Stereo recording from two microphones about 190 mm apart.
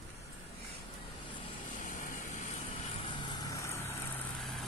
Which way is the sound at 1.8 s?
45° left (ahead or behind).